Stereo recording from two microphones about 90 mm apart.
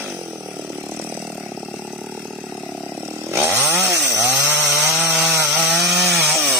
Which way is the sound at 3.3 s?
30° right (ahead or behind).